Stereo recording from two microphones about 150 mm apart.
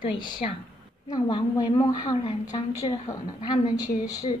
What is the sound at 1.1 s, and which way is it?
A woman's voice, 25° left (ahead or behind).